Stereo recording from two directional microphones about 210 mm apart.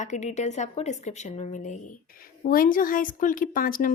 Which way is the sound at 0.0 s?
35° left (ahead or behind).